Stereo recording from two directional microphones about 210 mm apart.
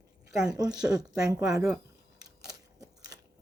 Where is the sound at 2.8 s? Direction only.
15° right (ahead or behind).